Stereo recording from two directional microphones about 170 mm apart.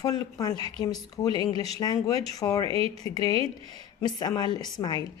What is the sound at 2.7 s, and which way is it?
Speech, 35° right (ahead or behind).